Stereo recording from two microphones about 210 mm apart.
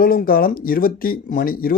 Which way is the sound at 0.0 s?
45° left (ahead or behind).